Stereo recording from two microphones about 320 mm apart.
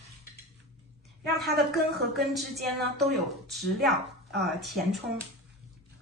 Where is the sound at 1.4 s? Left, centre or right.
Centre.